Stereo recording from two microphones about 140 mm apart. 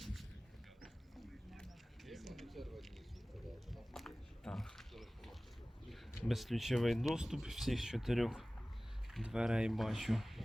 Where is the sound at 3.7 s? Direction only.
Centre (ahead or behind).